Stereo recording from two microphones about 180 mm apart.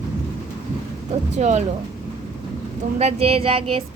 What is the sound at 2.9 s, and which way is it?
Speech, 35° right (ahead or behind).